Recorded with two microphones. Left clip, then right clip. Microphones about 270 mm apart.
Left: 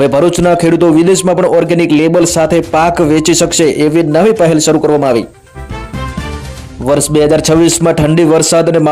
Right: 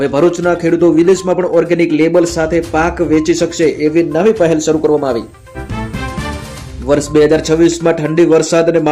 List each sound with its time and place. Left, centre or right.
0.0 s a man's voice: left
6.8 s a man's voice: left